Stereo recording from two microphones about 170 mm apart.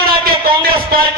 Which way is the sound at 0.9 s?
65° right (ahead or behind).